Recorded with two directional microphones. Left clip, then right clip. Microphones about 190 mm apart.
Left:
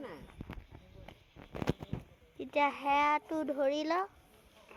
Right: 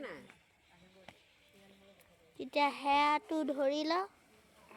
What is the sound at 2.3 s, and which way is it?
Speech, 10° right (ahead or behind).